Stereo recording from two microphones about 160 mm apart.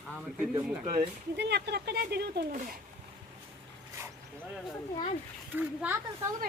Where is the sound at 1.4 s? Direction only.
90° right.